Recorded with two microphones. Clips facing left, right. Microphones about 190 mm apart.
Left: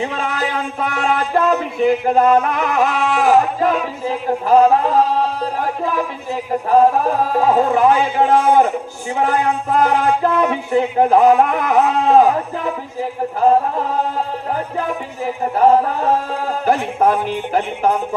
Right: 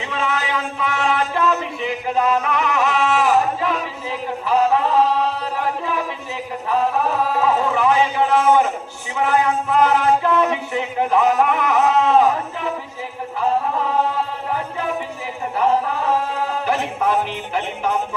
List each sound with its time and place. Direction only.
0.0 s music: 45° left (ahead or behind)
8.4 s a man's voice: 35° left (ahead or behind)
9.2 s music: 45° left (ahead or behind)
13.0 s music: 45° left (ahead or behind)
15.5 s music: 45° left (ahead or behind)